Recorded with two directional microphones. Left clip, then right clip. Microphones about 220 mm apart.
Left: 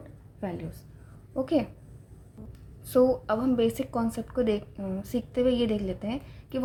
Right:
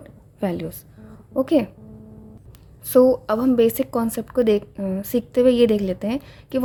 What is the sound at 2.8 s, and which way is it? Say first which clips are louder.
A woman's voice: right 8 dB; 35° right (ahead or behind).